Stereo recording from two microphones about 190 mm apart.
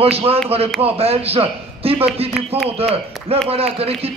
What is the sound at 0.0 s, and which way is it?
A man's voice, 30° right (ahead or behind).